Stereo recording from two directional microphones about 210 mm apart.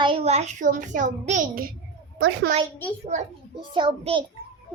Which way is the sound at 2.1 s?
60° right (ahead or behind).